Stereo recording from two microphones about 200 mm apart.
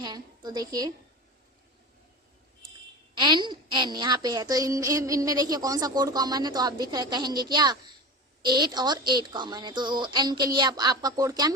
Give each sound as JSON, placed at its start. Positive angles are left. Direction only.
{"t": 0.0, "sound": "a woman's voice", "side_deg": -20}
{"t": 3.2, "sound": "speech", "side_deg": -20}